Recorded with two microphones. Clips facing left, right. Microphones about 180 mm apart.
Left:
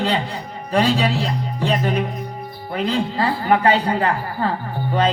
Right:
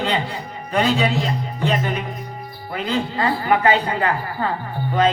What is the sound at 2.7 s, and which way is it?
Speech, 35° left (ahead or behind).